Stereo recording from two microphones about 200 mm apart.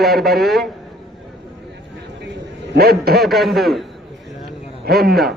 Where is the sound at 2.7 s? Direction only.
50° right (ahead or behind).